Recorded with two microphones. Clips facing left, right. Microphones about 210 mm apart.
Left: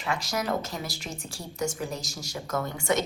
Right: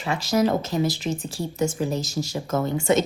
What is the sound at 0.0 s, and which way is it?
Speech, 25° right (ahead or behind).